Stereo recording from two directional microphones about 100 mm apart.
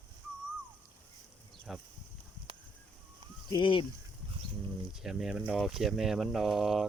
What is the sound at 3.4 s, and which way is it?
Speech, 55° left (ahead or behind).